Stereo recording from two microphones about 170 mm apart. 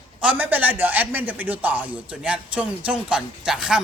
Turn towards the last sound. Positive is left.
turn(degrees=-5)  # may be behind; listen again after turning